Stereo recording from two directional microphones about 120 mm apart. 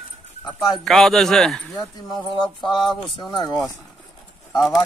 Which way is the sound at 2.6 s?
35° left (ahead or behind).